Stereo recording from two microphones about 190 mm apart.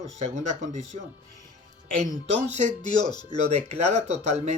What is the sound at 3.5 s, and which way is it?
Speech, 35° right (ahead or behind).